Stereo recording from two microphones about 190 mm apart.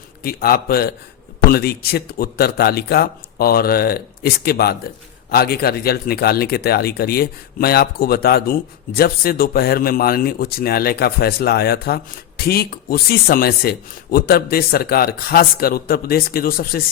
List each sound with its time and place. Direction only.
0.2 s speech: 50° left (ahead or behind)